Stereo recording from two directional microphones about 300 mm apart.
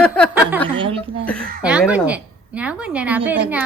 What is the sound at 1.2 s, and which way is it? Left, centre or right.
A woman's voice, centre.